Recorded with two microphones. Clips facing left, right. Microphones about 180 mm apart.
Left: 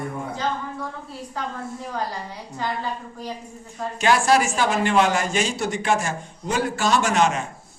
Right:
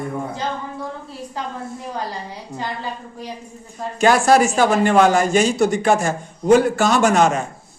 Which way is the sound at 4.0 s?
45° right (ahead or behind).